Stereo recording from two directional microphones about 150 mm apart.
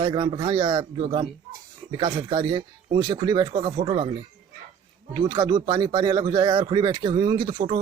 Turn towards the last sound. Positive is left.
turn(degrees=-30)  # may be behind; listen again after turning